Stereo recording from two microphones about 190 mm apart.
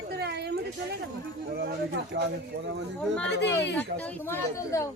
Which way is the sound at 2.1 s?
70° right (ahead or behind).